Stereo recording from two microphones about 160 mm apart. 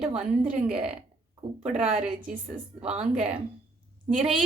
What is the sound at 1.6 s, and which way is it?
Speech, 40° right (ahead or behind).